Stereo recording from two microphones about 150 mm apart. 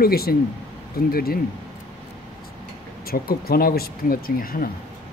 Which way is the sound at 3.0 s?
90° left.